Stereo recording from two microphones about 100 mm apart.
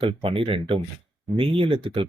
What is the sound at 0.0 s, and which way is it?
Speech, 60° right (ahead or behind).